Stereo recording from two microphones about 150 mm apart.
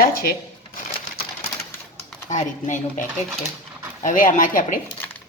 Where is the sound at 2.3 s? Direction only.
55° left (ahead or behind).